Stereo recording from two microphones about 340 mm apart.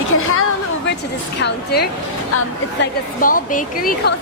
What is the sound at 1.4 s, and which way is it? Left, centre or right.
A woman's voice, left.